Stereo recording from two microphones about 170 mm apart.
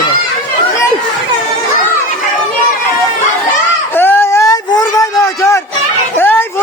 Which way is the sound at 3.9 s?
10° left (ahead or behind).